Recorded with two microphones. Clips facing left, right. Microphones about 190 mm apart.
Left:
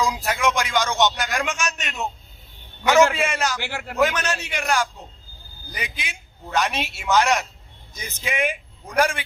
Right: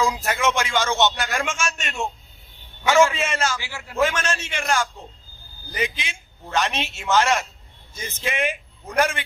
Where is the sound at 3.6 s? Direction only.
60° left (ahead or behind).